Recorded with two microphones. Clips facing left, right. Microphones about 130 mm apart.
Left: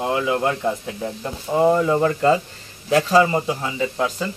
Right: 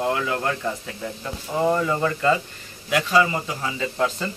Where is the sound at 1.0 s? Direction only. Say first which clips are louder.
Left 4 dB; 25° left (ahead or behind).